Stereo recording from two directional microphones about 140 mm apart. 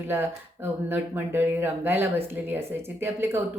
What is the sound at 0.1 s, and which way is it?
Speech, 15° right (ahead or behind).